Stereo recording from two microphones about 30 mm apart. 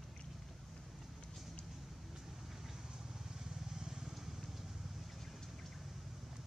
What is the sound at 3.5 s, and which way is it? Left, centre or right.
Vehicle, centre.